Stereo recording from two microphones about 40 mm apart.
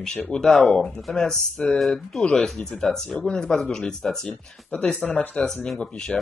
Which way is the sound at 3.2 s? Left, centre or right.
Left.